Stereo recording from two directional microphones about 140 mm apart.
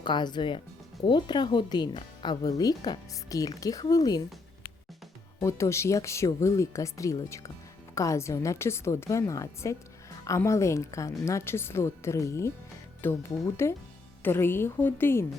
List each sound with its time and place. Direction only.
0.0 s speech: 35° left (ahead or behind)
5.4 s a woman's voice: 20° left (ahead or behind)